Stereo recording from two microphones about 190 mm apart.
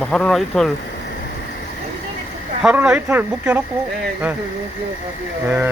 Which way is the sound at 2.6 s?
5° right (ahead or behind).